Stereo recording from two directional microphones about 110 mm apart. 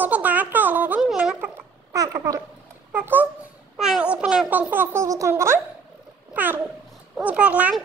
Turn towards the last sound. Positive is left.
turn(degrees=-10)  # may be behind; listen again after turning